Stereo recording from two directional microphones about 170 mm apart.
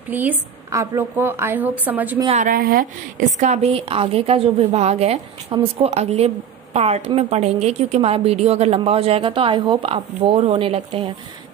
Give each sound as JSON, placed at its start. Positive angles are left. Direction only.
{"t": 0.1, "sound": "a woman's voice", "side_deg": -10}
{"t": 2.2, "sound": "a woman's voice", "side_deg": -45}